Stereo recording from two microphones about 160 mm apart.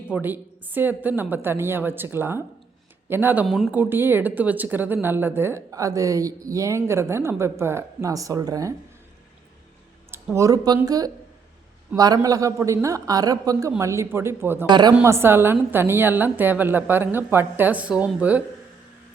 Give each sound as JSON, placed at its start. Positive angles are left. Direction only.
{"t": 0.1, "sound": "speech", "side_deg": -10}
{"t": 3.4, "sound": "speech", "side_deg": 0}
{"t": 3.7, "sound": "speech", "side_deg": -10}
{"t": 10.1, "sound": "speech", "side_deg": -15}
{"t": 14.7, "sound": "speech", "side_deg": -25}
{"t": 15.0, "sound": "speech", "side_deg": -15}